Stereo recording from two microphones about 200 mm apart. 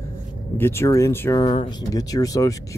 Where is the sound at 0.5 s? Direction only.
10° left (ahead or behind).